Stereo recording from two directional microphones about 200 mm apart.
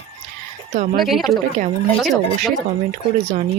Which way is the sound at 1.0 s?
Centre (ahead or behind).